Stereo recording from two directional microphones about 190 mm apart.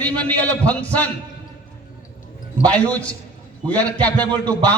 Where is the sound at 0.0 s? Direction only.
5° left (ahead or behind).